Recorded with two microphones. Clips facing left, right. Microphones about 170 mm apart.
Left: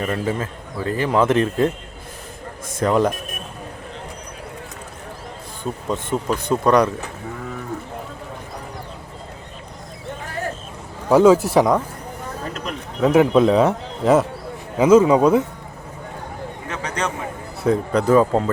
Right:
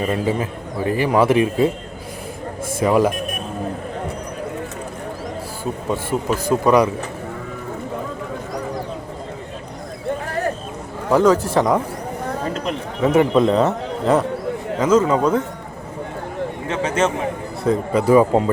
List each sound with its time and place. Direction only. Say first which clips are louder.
0.0 s speech: right 3 dB; 15° right (ahead or behind)
2.7 s a man's voice: right 2 dB; 10° right (ahead or behind)
5.9 s speech: right 1 dB; 10° right (ahead or behind)
11.1 s a man's voice: left 2 dB; 10° left (ahead or behind)
13.0 s a man's voice: left 1 dB; centre (ahead or behind)
16.6 s a sound: right 6 dB; 25° right (ahead or behind)
17.6 s speech: even; 5° right (ahead or behind)